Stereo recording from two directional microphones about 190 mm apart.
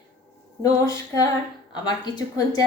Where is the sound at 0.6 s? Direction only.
20° left (ahead or behind).